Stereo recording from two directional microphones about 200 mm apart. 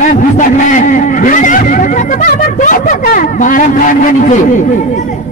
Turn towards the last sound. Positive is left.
turn(degrees=40)  # may be behind; listen again after turning